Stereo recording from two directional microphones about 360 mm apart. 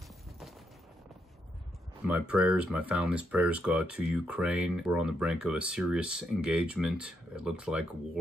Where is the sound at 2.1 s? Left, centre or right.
Centre.